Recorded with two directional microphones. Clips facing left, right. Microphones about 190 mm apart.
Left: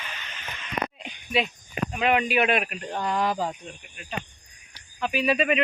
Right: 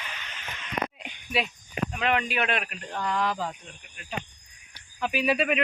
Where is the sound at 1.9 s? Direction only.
10° left (ahead or behind).